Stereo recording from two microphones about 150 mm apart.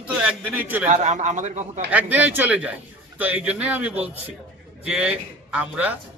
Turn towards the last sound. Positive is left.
turn(degrees=-10)  # may be behind; listen again after turning